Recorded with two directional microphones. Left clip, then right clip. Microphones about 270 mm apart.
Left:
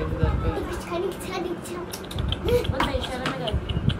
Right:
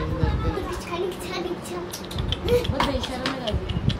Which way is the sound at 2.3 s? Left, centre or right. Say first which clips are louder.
Right 1 dB; centre.